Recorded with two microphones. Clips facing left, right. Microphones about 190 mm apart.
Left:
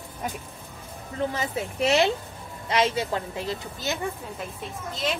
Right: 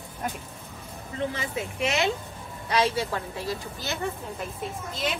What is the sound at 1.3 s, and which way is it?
Speech, 35° left (ahead or behind).